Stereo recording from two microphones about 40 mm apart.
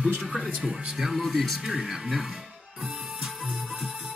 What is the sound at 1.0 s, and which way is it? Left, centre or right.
Speech, centre.